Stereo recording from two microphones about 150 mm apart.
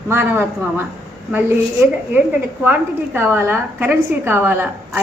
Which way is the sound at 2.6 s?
15° right (ahead or behind).